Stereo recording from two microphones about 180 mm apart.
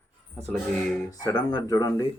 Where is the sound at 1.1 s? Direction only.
20° left (ahead or behind).